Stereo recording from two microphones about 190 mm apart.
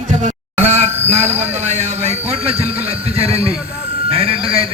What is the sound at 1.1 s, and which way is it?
A man's voice, 35° right (ahead or behind).